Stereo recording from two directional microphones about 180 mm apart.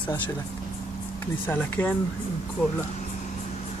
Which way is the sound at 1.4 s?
10° left (ahead or behind).